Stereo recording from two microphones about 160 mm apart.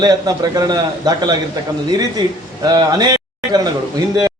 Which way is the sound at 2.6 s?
25° right (ahead or behind).